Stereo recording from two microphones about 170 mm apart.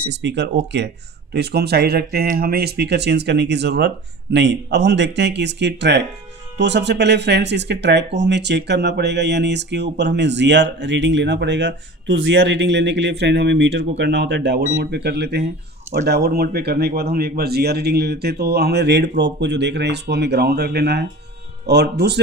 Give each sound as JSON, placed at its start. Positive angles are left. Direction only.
{"t": 0.1, "sound": "speech", "side_deg": -90}
{"t": 1.3, "sound": "speech", "side_deg": -75}